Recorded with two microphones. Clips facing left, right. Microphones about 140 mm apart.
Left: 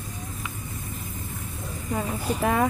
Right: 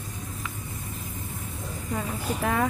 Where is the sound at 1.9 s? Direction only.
20° left (ahead or behind).